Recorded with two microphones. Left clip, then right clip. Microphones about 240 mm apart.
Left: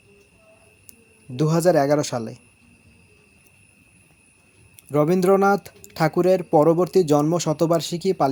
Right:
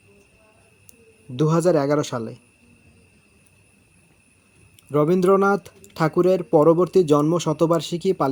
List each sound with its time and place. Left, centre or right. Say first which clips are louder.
1.4 s speech: left 1 dB; centre
4.9 s speech: even; centre